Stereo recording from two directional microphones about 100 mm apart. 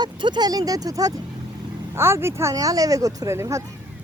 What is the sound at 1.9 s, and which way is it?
Speech, 25° right (ahead or behind).